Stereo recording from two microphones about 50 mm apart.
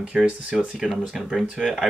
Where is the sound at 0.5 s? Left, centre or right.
Centre.